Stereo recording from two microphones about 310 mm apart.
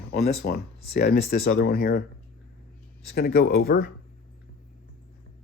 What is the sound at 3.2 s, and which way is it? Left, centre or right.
Speech, left.